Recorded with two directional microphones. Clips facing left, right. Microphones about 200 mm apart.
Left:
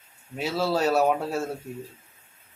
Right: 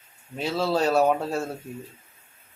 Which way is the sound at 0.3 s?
5° left (ahead or behind).